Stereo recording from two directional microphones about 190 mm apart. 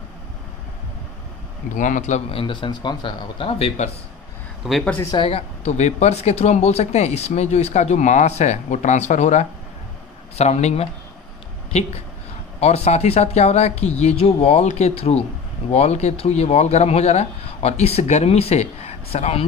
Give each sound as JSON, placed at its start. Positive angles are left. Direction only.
{"t": 1.8, "sound": "speech", "side_deg": 40}
{"t": 4.6, "sound": "speech", "side_deg": 5}
{"t": 5.1, "sound": "speech", "side_deg": 30}
{"t": 12.5, "sound": "speech", "side_deg": 35}